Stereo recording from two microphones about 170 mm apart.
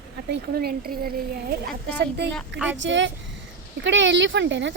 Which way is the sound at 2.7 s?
90° right.